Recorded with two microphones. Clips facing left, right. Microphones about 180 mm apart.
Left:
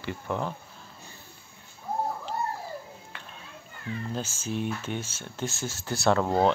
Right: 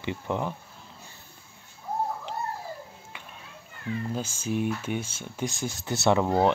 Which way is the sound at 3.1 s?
10° right (ahead or behind).